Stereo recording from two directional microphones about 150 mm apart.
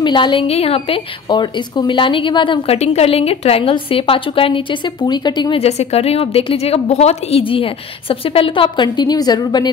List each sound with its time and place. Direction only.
0.0 s a woman's voice: 30° left (ahead or behind)